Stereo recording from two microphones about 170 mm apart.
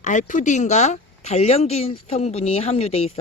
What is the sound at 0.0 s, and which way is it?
Speech, 45° left (ahead or behind).